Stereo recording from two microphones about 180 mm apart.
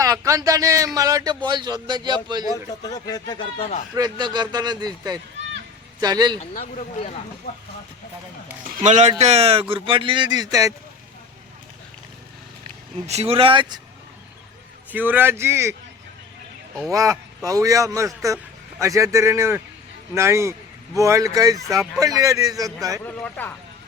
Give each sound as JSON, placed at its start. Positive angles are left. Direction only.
{"t": 0.0, "sound": "speech", "side_deg": -20}
{"t": 2.8, "sound": "speech", "side_deg": 20}
{"t": 3.9, "sound": "speech", "side_deg": -20}
{"t": 6.0, "sound": "speech", "side_deg": -20}
{"t": 6.4, "sound": "speech", "side_deg": 45}
{"t": 8.6, "sound": "speech", "side_deg": -45}
{"t": 13.1, "sound": "speech", "side_deg": -35}
{"t": 14.9, "sound": "speech", "side_deg": -10}
{"t": 16.9, "sound": "speech", "side_deg": -20}
{"t": 23.0, "sound": "speech", "side_deg": 10}